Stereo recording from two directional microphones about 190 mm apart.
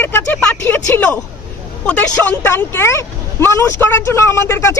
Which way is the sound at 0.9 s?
10° left (ahead or behind).